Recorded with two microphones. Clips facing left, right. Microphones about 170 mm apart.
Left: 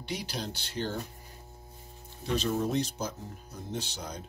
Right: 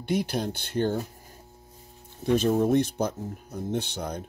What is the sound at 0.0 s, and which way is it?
Speech, 55° right (ahead or behind).